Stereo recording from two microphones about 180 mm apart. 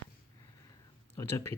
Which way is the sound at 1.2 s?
15° left (ahead or behind).